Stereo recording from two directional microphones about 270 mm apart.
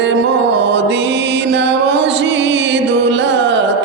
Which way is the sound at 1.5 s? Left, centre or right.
Right.